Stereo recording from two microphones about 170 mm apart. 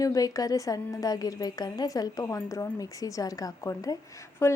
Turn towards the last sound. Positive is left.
turn(degrees=15)  # may be behind; listen again after turning